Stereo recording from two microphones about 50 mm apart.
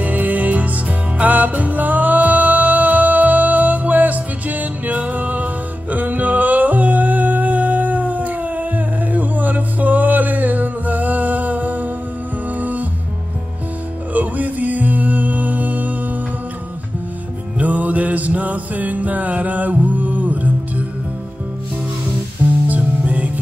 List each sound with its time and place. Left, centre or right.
0.0 s music: right
14.1 s music: right
17.6 s music: right
22.7 s music: right